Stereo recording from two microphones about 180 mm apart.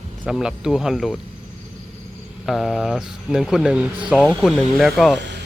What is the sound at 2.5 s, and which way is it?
Speech, centre (ahead or behind).